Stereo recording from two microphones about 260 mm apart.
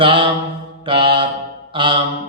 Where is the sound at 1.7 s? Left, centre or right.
Centre.